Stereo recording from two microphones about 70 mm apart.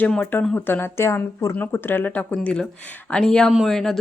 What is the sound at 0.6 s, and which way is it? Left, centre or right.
Speech, left.